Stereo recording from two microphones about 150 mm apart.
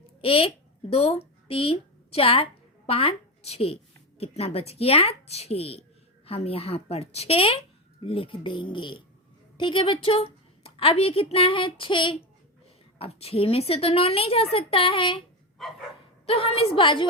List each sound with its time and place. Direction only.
0.2 s a child's voice: 40° left (ahead or behind)
15.6 s dog: centre (ahead or behind)
16.2 s a woman's voice: 40° left (ahead or behind)